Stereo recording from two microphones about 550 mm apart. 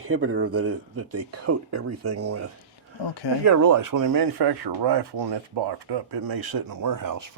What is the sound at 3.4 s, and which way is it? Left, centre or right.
Speech, right.